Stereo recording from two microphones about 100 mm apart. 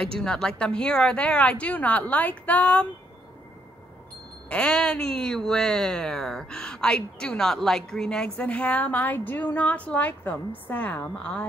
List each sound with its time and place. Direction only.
0.2 s speech: 5° left (ahead or behind)
4.5 s speech: 10° left (ahead or behind)